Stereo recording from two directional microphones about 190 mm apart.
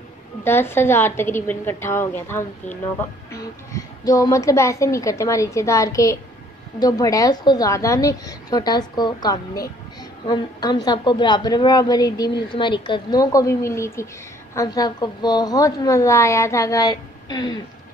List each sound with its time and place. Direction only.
0.4 s a woman's voice: 10° left (ahead or behind)